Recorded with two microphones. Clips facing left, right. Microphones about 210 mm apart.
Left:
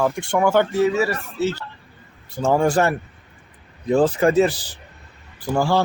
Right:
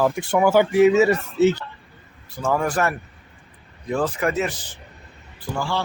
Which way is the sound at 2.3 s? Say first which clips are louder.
Left 4 dB; 25° left (ahead or behind).